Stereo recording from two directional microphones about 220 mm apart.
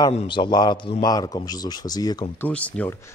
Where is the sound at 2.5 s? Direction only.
5° left (ahead or behind).